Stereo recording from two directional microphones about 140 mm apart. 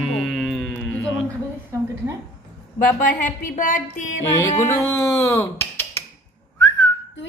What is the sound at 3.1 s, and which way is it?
A woman's voice, 70° left (ahead or behind).